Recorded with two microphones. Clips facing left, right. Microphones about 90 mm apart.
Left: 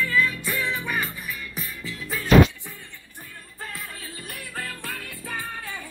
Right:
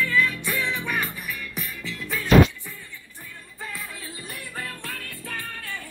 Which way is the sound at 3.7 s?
Centre (ahead or behind).